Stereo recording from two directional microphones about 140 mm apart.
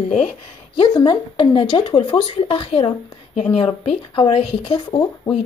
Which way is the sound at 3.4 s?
5° left (ahead or behind).